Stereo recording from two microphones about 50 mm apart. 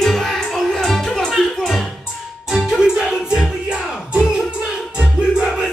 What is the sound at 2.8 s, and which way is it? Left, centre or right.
Music, centre.